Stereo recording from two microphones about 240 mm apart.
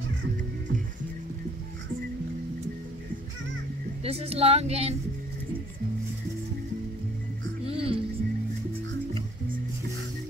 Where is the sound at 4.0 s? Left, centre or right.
Right.